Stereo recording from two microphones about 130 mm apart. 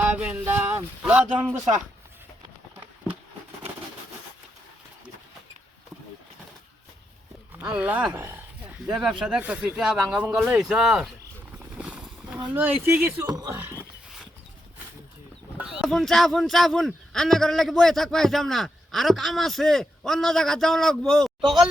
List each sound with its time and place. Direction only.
0.0 s a sound: 10° right (ahead or behind)
7.6 s speech: 10° right (ahead or behind)
8.9 s speech: 5° right (ahead or behind)
11.8 s a sound: 10° right (ahead or behind)
13.2 s speech: 30° right (ahead or behind)
15.5 s speech: 5° right (ahead or behind)